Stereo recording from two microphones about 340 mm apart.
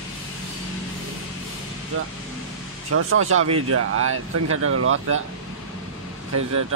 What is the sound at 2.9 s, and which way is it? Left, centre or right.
Speech, right.